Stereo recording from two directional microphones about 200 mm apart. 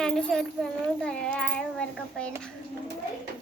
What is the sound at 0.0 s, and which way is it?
Speech, centre (ahead or behind).